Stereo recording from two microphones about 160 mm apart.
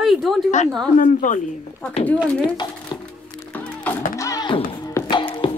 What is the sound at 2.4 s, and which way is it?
Speech, 25° left (ahead or behind).